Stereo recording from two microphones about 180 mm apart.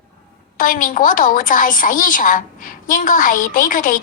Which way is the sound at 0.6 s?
50° left (ahead or behind).